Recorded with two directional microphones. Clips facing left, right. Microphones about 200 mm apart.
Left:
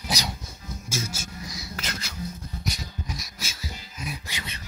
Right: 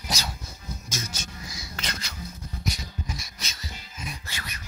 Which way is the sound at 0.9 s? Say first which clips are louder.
Left 5 dB; 10° left (ahead or behind).